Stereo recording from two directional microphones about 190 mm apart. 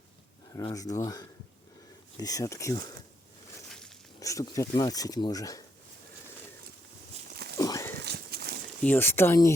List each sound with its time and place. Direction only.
0.5 s speech: 20° left (ahead or behind)
4.2 s speech: 15° left (ahead or behind)
7.6 s a sound: 15° left (ahead or behind)
8.0 s horse: 55° right (ahead or behind)
8.8 s speech: 10° left (ahead or behind)